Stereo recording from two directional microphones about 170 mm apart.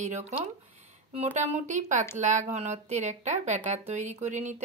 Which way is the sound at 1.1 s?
40° right (ahead or behind).